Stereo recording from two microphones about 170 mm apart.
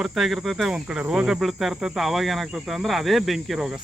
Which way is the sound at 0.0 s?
Centre (ahead or behind).